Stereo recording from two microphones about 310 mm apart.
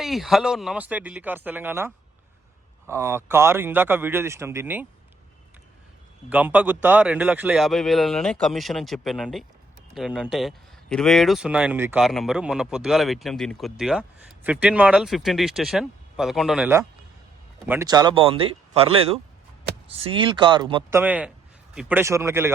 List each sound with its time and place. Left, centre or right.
0.0 s speech: centre
2.9 s speech: centre
6.3 s speech: centre